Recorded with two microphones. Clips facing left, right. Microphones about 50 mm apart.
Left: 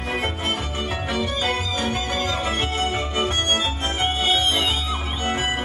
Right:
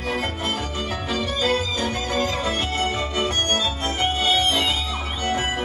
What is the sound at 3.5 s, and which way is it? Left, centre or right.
Organ, left.